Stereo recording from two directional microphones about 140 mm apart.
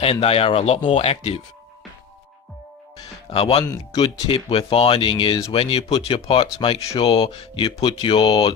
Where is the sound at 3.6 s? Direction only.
25° left (ahead or behind).